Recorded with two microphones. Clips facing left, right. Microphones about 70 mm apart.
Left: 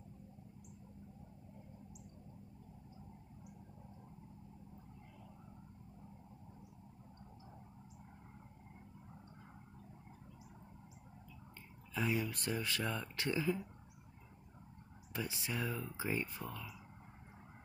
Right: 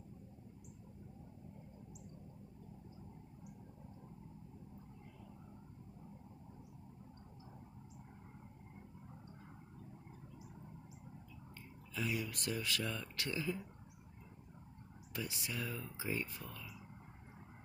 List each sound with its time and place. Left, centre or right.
11.9 s speech: left
15.1 s speech: left